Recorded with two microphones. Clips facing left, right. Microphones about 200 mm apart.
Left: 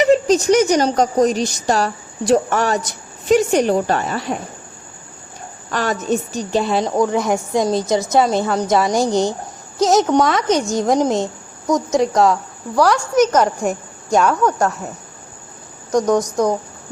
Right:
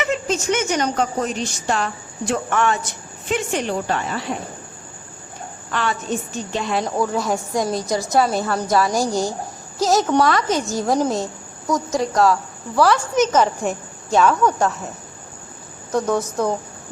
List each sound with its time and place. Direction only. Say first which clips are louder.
0.0 s a woman's voice: left 9 dB; 35° left (ahead or behind)
5.7 s a woman's voice: left 4 dB; 40° left (ahead or behind)
6.9 s a woman's voice: left 5 dB; 15° left (ahead or behind)
15.9 s speech: left 4 dB; 15° left (ahead or behind)